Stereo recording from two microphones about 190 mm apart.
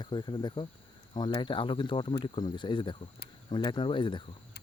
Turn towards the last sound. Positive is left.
turn(degrees=25)  # may be behind; listen again after turning